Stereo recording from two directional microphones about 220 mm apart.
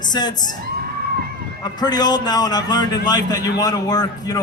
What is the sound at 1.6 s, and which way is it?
A man's voice, 20° left (ahead or behind).